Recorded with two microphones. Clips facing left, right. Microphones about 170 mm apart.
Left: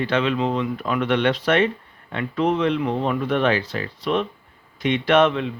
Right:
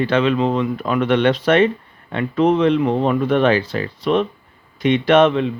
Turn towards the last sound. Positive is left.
turn(degrees=-25)  # may be behind; listen again after turning